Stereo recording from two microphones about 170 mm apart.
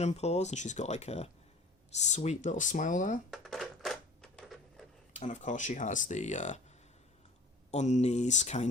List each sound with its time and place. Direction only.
0.0 s speech: 40° left (ahead or behind)
3.2 s a sound: centre (ahead or behind)
5.2 s speech: 45° left (ahead or behind)
7.7 s speech: 40° left (ahead or behind)